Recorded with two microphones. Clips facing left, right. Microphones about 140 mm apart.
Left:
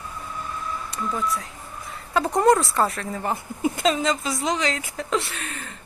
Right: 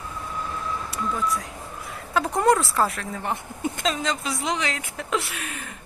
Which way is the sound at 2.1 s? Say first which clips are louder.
Left 2 dB; centre (ahead or behind).